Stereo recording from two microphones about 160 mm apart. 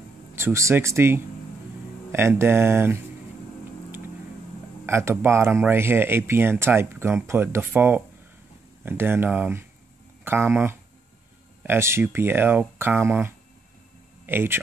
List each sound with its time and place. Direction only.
0.4 s speech: 15° right (ahead or behind)
4.8 s speech: 15° right (ahead or behind)